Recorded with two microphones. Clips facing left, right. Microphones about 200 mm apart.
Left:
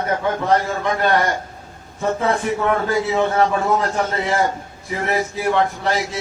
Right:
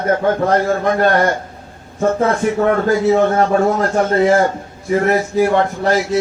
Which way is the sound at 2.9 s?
45° right (ahead or behind).